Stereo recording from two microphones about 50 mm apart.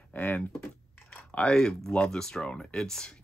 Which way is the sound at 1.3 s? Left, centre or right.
Centre.